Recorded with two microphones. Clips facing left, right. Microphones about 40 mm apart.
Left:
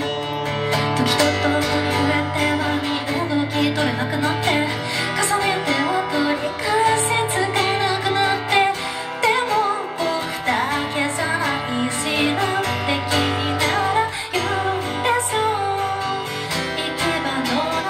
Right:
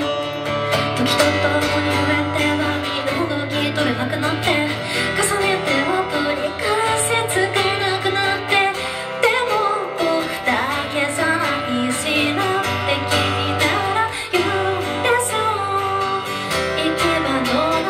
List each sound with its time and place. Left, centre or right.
1.2 s music: centre
1.6 s music: right
5.2 s music: centre
13.2 s music: right
17.1 s music: right